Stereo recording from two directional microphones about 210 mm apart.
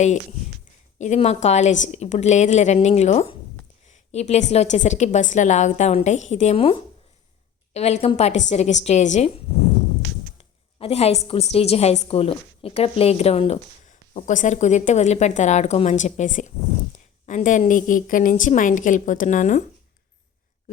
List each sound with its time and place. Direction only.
0.9 s a woman's voice: 35° left (ahead or behind)
10.8 s a woman's voice: 30° left (ahead or behind)